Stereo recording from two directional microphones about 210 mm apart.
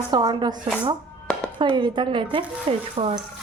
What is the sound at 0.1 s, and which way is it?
A woman's voice, 20° right (ahead or behind).